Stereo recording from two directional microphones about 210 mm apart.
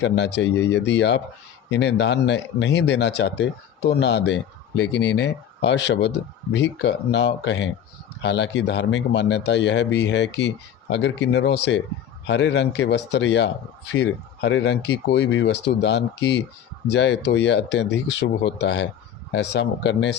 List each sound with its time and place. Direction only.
0.0 s a man's voice: 55° left (ahead or behind)